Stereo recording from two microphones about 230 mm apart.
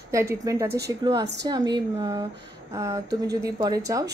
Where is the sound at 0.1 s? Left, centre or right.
Centre.